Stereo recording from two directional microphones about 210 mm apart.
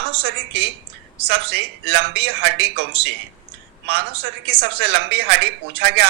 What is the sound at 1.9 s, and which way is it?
Speech, 55° right (ahead or behind).